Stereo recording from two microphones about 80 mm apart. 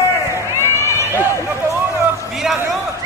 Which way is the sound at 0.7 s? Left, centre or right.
Left.